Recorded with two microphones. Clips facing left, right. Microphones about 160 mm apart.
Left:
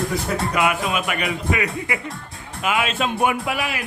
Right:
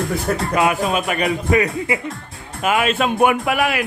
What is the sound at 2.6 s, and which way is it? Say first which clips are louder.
Speech: right 4 dB; 50° right (ahead or behind).